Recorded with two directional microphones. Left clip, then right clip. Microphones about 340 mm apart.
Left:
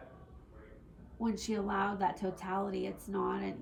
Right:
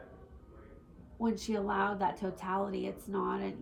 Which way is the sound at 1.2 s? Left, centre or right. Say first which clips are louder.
Right 2 dB; centre.